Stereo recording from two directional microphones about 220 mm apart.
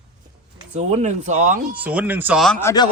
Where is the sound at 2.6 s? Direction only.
15° left (ahead or behind).